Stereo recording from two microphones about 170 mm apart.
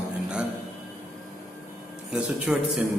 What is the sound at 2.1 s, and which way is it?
Speech, 5° right (ahead or behind).